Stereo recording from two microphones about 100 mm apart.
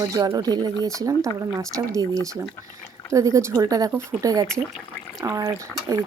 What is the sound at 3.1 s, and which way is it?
Speech, 30° right (ahead or behind).